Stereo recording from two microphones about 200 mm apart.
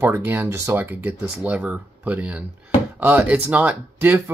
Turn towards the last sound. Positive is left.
turn(degrees=-10)  # may be behind; listen again after turning